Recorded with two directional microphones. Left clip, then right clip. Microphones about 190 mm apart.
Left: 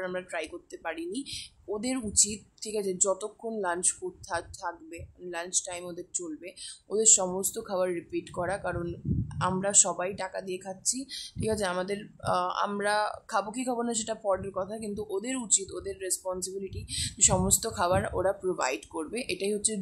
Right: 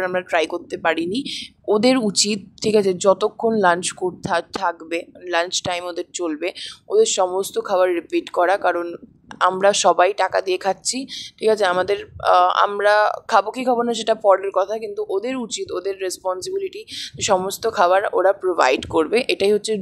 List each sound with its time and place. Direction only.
0.0 s speech: 35° right (ahead or behind)